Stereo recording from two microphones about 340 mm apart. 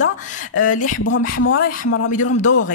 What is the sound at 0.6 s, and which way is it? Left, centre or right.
Speech, left.